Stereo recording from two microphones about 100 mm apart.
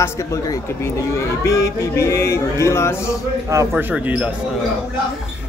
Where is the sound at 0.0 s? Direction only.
30° left (ahead or behind).